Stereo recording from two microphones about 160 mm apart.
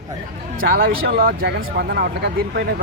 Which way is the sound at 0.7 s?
65° right (ahead or behind).